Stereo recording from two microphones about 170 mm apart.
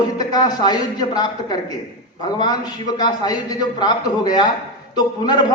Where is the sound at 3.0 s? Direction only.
25° left (ahead or behind).